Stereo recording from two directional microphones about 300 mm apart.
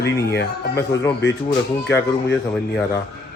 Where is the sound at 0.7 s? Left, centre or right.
Centre.